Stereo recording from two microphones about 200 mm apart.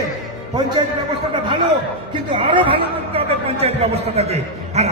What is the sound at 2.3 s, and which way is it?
A man's voice, 25° right (ahead or behind).